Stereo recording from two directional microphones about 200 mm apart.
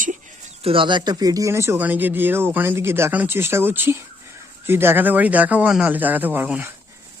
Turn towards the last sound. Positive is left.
turn(degrees=-10)  # may be behind; listen again after turning